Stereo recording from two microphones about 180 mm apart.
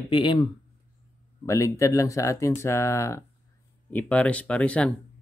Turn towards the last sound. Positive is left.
turn(degrees=5)  # may be behind; listen again after turning